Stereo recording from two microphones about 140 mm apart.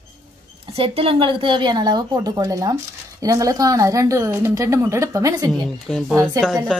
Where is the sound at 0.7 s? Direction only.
45° right (ahead or behind); by 5.5 s 25° right (ahead or behind).